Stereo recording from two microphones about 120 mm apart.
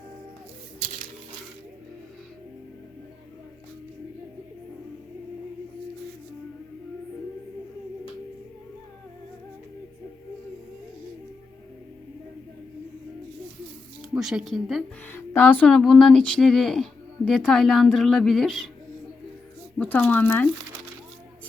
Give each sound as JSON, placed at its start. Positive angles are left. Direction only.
{"t": 14.2, "sound": "speech", "side_deg": -5}
{"t": 15.0, "sound": "speech", "side_deg": 15}
{"t": 19.8, "sound": "speech", "side_deg": 10}